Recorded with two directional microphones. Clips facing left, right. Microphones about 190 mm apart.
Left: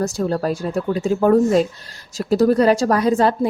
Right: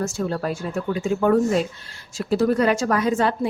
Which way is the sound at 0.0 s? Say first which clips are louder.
Left 4 dB; 35° left (ahead or behind).